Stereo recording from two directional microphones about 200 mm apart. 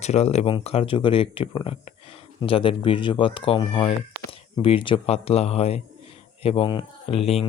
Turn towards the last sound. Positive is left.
turn(degrees=30)  # may be behind; listen again after turning